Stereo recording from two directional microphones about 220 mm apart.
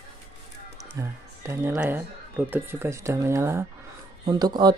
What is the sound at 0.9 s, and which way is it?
Speech, 10° right (ahead or behind).